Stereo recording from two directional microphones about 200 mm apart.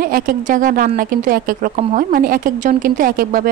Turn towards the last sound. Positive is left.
turn(degrees=-45)  # may be behind; listen again after turning